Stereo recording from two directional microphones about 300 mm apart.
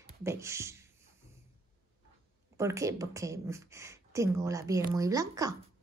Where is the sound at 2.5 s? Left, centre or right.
Centre.